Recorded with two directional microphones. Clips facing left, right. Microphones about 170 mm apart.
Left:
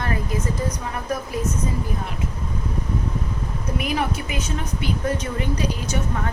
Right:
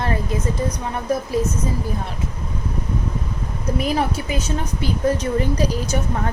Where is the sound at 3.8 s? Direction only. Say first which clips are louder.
Right 3 dB; 35° right (ahead or behind).